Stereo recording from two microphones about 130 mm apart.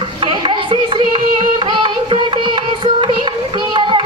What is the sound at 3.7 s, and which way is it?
Children playing, 40° right (ahead or behind).